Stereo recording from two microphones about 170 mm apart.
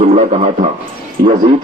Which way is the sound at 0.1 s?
40° right (ahead or behind).